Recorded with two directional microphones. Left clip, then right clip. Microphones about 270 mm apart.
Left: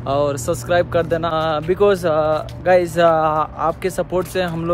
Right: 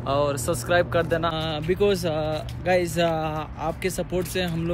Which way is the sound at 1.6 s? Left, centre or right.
Left.